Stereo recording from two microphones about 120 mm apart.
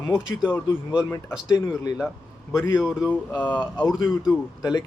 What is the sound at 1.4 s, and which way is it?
Speech, 35° left (ahead or behind).